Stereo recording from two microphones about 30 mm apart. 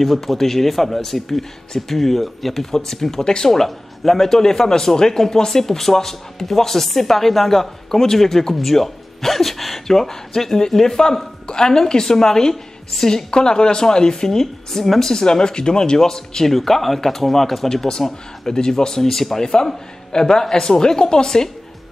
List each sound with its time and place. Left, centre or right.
0.0 s speech: centre
2.6 s speech: centre
9.8 s speech: centre
16.4 s speech: centre
17.6 s speech: centre
19.0 s speech: centre
19.4 s speech: left